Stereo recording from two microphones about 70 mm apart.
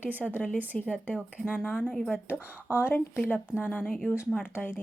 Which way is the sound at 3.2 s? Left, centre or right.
Centre.